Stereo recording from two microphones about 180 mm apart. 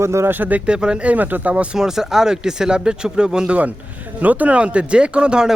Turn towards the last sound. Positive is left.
turn(degrees=-5)  # may be behind; listen again after turning